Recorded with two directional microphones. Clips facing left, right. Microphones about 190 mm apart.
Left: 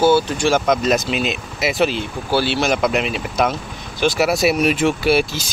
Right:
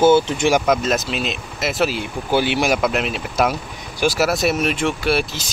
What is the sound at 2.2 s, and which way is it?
Speech, 15° right (ahead or behind).